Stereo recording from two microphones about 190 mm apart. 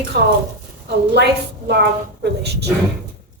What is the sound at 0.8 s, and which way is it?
A woman's voice, 60° right (ahead or behind).